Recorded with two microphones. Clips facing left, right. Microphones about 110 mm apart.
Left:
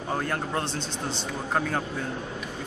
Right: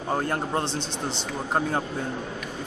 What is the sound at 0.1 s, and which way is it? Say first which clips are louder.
Speech: right 3 dB; 25° right (ahead or behind).